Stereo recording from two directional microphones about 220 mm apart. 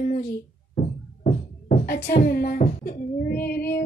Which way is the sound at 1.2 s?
35° left (ahead or behind).